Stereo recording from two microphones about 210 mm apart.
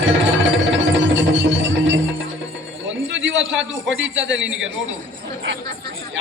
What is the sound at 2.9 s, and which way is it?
A man's voice, 60° right (ahead or behind).